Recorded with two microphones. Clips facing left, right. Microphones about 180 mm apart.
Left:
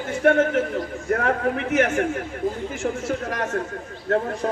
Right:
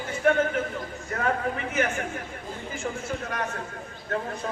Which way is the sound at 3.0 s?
90° left.